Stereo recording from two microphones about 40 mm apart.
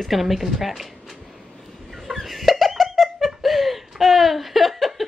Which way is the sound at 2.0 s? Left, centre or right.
Centre.